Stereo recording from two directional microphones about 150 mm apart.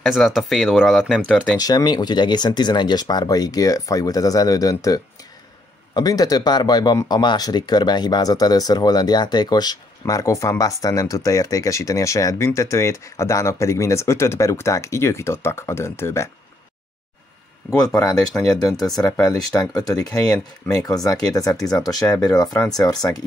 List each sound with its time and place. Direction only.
0.0 s speech: centre (ahead or behind)
1.6 s speech: 25° left (ahead or behind)
17.6 s speech: 25° left (ahead or behind)